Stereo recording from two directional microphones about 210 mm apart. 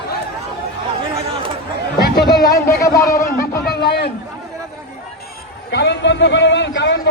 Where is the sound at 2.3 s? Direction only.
20° left (ahead or behind).